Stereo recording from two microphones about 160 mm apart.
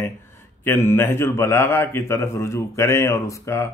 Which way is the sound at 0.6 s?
15° left (ahead or behind).